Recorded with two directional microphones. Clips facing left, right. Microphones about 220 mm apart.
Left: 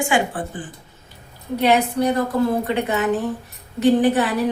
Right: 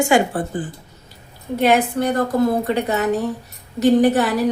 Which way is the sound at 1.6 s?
50° right (ahead or behind).